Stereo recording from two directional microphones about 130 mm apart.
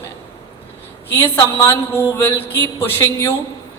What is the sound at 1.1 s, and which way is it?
A woman's voice, 25° left (ahead or behind).